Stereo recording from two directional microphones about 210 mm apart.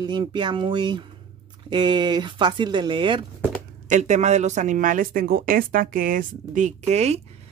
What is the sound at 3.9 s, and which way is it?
A woman's voice, 35° right (ahead or behind).